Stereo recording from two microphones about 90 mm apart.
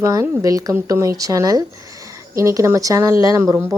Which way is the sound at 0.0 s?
35° right (ahead or behind).